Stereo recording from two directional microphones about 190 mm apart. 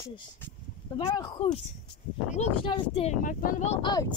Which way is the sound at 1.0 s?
20° left (ahead or behind).